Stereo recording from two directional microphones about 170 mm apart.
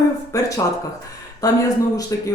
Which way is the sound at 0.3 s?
20° left (ahead or behind).